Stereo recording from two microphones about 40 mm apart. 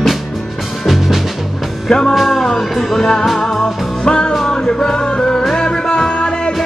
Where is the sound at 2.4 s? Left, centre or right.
Centre.